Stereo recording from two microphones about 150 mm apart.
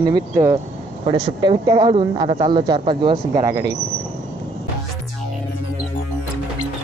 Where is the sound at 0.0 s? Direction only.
25° right (ahead or behind).